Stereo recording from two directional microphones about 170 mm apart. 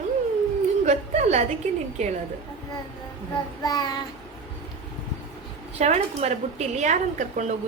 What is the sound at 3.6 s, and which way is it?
Child singing, 20° left (ahead or behind).